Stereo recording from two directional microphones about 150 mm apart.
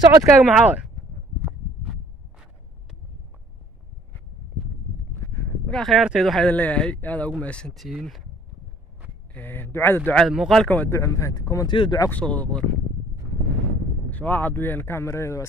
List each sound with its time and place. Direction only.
0.0 s speech: 25° right (ahead or behind)
0.4 s speech: 10° right (ahead or behind)
5.7 s speech: 5° left (ahead or behind)
9.3 s speech: 15° left (ahead or behind)
10.2 s speech: centre (ahead or behind); by 12.1 s 30° left (ahead or behind)
12.1 s speech: 10° left (ahead or behind)
14.1 s speech: 10° left (ahead or behind)